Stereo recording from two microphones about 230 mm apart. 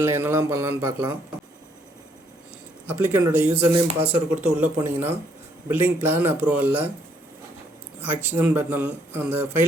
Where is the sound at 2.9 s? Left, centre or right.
Centre.